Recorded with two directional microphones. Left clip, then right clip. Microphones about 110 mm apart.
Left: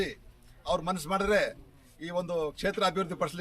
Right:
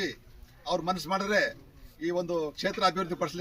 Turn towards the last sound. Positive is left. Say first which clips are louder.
# even
turn(degrees=35)  # may be behind; listen again after turning